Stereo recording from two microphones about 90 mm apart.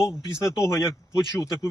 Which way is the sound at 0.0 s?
35° left (ahead or behind).